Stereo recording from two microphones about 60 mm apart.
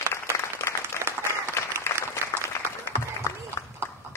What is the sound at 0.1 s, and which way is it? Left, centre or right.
Applause, left.